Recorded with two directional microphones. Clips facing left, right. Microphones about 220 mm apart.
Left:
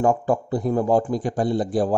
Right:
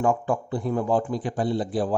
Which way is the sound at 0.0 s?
40° left (ahead or behind).